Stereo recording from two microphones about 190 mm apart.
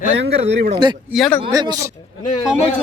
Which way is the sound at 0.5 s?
55° right (ahead or behind).